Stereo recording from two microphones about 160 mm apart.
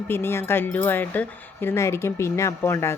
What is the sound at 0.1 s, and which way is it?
Speech, 15° left (ahead or behind).